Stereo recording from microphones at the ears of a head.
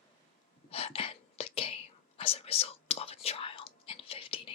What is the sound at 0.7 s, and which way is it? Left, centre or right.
Whispering, left.